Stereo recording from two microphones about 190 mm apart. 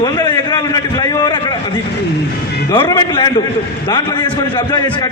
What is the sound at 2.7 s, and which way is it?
A man's voice, 25° left (ahead or behind).